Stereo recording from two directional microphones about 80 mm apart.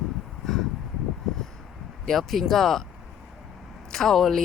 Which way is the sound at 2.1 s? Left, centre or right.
Centre.